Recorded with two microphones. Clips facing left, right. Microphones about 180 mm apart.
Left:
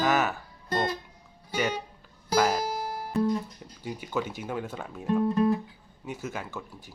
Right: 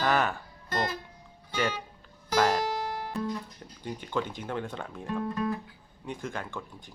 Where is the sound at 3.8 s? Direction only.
5° left (ahead or behind).